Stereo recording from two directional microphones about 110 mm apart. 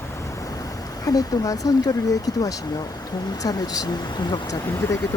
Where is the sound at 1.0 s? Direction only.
35° left (ahead or behind).